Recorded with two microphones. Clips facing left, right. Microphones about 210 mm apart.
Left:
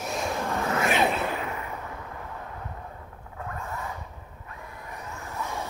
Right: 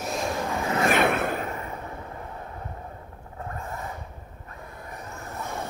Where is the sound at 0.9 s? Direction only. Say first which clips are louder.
Right 2 dB; 60° right (ahead or behind).